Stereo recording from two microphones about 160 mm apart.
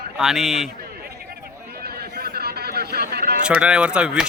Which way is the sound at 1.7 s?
75° right (ahead or behind).